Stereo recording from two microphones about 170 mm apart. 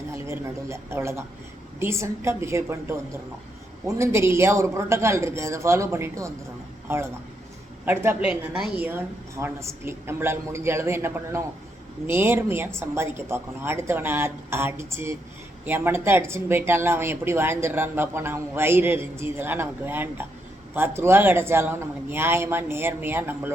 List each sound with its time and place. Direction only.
0.1 s a woman's voice: 15° right (ahead or behind)